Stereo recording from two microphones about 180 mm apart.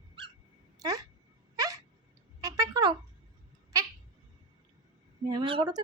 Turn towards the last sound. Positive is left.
turn(degrees=-25)  # may be behind; listen again after turning